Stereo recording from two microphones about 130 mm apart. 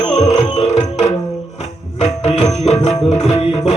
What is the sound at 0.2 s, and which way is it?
Music, 60° left (ahead or behind).